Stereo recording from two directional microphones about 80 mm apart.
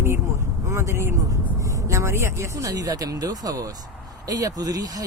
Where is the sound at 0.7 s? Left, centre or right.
Right.